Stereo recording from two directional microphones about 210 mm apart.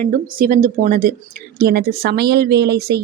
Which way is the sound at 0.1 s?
40° right (ahead or behind).